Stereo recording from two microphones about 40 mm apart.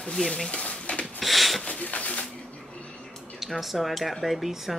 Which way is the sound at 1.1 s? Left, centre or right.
Centre.